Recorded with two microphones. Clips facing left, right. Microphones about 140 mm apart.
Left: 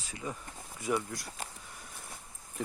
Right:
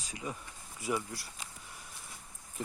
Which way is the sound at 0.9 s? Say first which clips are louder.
Left 2 dB; 5° right (ahead or behind).